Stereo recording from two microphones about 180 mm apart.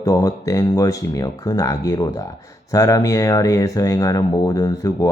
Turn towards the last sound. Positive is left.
turn(degrees=20)  # may be behind; listen again after turning